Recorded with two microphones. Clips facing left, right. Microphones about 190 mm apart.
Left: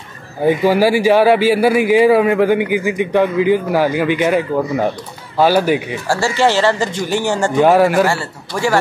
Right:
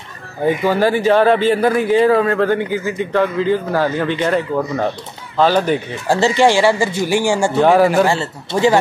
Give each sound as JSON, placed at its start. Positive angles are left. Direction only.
{"t": 0.7, "sound": "a man's voice", "side_deg": 10}
{"t": 6.0, "sound": "speech", "side_deg": -20}
{"t": 7.5, "sound": "speech", "side_deg": 5}
{"t": 8.1, "sound": "a man's voice", "side_deg": -20}